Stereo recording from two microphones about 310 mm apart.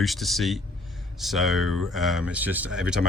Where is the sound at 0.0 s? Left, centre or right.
Centre.